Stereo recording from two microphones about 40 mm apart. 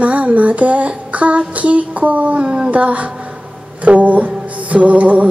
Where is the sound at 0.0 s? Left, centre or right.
Right.